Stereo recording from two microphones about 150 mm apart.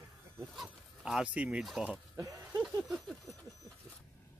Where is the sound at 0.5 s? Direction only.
5° right (ahead or behind).